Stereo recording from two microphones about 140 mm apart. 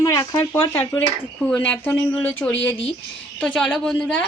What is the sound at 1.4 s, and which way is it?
Speech, 10° left (ahead or behind).